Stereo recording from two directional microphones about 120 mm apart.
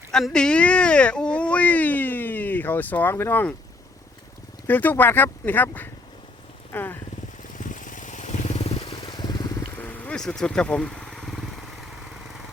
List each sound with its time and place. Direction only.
0.1 s speech: 5° left (ahead or behind)
4.6 s speech: 15° left (ahead or behind)
7.7 s vehicle: 90° left
8.5 s vehicle: 60° left (ahead or behind)
9.0 s vehicle: 40° left (ahead or behind)
9.6 s vehicle: 15° left (ahead or behind)